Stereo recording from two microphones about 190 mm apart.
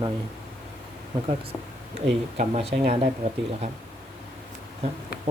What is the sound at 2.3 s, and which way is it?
Speech, 40° right (ahead or behind).